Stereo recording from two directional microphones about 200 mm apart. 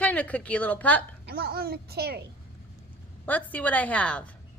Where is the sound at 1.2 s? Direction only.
50° right (ahead or behind).